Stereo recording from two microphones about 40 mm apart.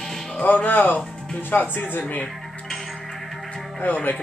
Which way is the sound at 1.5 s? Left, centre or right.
Left.